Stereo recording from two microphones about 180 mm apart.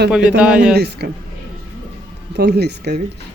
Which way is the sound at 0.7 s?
65° right (ahead or behind).